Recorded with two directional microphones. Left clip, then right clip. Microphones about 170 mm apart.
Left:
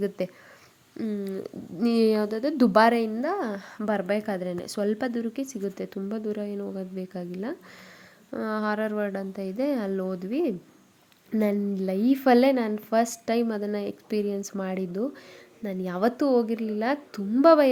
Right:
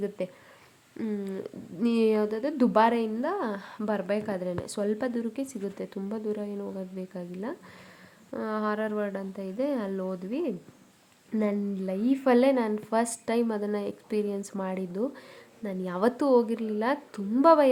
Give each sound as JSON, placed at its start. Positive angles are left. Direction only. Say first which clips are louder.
{"t": 0.2, "sound": "speech", "louder": "left 3 dB", "side_deg": 20}
{"t": 0.9, "sound": "speech", "louder": "left 2 dB", "side_deg": 10}